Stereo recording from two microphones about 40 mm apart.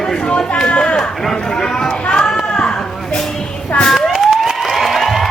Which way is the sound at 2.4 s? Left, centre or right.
Left.